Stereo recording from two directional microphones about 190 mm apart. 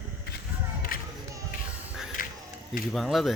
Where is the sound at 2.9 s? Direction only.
Centre (ahead or behind).